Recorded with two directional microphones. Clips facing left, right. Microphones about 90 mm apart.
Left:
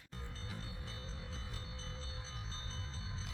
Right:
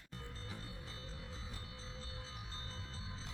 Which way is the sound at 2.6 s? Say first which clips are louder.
Left 1 dB; 10° right (ahead or behind).